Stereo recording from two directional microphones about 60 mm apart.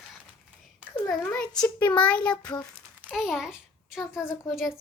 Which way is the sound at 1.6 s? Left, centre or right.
Left.